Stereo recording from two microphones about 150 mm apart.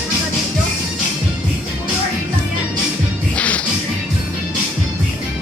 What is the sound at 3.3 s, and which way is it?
Music, 10° left (ahead or behind).